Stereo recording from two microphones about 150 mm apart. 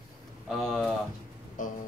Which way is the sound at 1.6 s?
60° left (ahead or behind).